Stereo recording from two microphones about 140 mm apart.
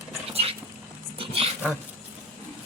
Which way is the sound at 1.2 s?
40° right (ahead or behind).